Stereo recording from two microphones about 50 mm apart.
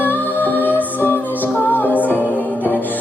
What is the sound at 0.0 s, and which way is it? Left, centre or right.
Music, left.